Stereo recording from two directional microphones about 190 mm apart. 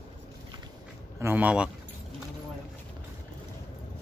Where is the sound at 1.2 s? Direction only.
10° right (ahead or behind).